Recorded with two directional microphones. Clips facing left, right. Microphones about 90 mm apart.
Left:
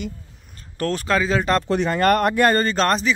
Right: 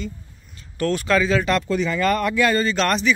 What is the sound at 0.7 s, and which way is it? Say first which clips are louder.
Speech: right 1 dB; 35° left (ahead or behind).